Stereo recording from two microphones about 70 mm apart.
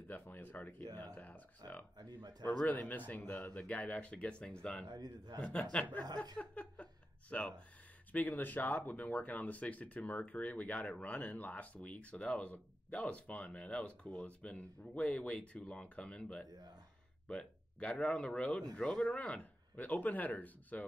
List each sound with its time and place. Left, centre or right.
0.1 s speech: left
1.6 s speech: right
2.0 s a man's voice: right
2.6 s speech: left
4.8 s a man's voice: right
5.4 s speech: centre